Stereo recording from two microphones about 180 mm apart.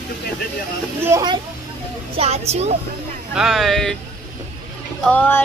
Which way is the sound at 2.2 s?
35° right (ahead or behind).